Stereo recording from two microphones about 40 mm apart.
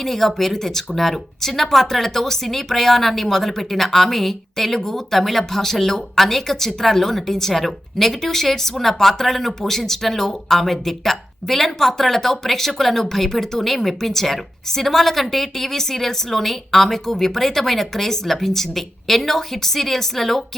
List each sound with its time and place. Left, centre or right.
0.0 s speech: centre